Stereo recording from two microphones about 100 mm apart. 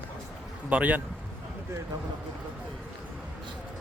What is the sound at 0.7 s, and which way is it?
Speech, 15° right (ahead or behind).